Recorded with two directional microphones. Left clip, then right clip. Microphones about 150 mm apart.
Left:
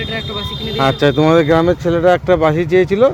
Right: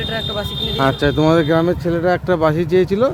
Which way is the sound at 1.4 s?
5° left (ahead or behind).